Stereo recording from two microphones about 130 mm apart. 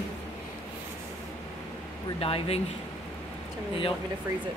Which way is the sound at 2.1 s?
50° left (ahead or behind).